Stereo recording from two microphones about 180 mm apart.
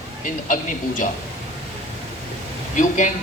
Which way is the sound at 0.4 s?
45° left (ahead or behind).